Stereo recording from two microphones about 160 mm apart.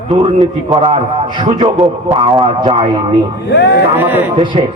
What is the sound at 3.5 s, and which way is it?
Speech, 90° left.